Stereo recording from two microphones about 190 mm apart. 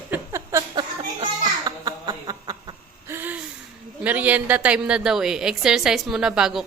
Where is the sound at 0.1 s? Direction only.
15° right (ahead or behind).